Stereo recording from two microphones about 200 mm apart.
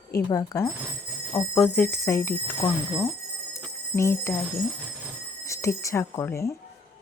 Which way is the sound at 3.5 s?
10° left (ahead or behind).